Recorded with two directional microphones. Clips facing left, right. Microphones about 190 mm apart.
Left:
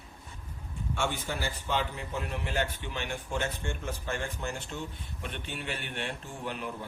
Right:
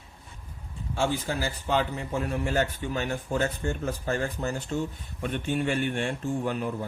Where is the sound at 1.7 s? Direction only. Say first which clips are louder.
Right 6 dB; 45° right (ahead or behind).